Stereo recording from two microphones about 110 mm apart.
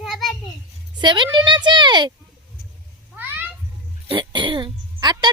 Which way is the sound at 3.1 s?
15° right (ahead or behind).